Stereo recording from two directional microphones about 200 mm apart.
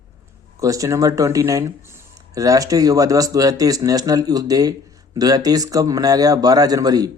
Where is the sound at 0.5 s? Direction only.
15° right (ahead or behind).